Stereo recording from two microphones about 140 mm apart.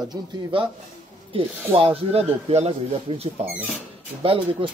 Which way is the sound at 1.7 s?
45° right (ahead or behind).